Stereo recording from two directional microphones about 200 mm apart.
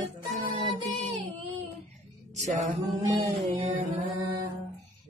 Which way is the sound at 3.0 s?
25° right (ahead or behind).